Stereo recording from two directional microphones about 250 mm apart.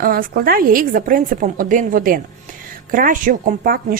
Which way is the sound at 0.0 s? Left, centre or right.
Right.